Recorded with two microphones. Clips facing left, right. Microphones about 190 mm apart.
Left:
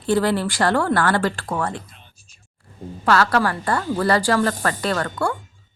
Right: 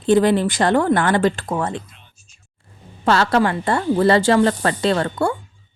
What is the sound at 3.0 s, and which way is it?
Speech, 25° right (ahead or behind).